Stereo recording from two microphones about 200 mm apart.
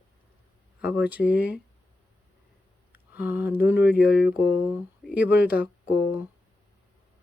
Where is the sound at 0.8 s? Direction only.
5° right (ahead or behind).